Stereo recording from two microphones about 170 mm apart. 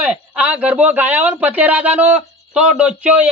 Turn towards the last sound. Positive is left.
turn(degrees=-10)  # may be behind; listen again after turning